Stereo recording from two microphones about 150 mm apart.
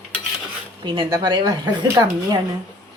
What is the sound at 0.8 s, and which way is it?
Speech, 25° right (ahead or behind).